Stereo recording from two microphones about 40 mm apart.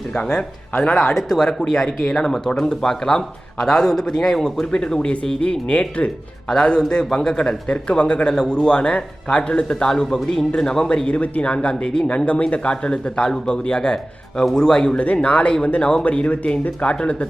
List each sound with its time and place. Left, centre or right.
0.1 s speech: centre
1.1 s speech: centre
4.6 s speech: left
12.1 s speech: left; by 14.9 s centre
14.9 s speech: left